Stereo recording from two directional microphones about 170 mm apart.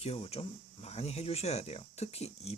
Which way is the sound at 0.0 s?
35° left (ahead or behind).